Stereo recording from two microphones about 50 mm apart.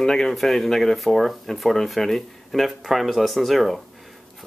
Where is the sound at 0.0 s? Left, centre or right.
Centre.